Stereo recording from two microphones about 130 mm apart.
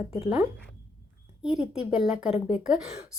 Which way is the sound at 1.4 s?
5° right (ahead or behind).